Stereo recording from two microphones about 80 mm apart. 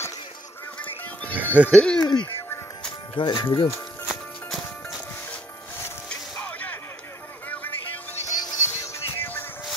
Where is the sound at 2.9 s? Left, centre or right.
Left.